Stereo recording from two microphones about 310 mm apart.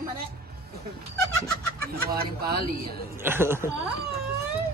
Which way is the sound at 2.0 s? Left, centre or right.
Right.